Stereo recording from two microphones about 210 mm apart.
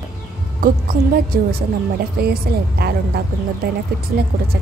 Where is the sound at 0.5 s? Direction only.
45° right (ahead or behind).